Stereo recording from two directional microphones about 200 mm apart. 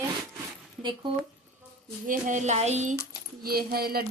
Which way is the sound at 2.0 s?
40° right (ahead or behind).